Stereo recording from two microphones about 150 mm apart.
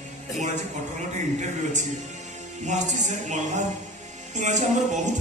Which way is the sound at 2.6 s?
55° right (ahead or behind).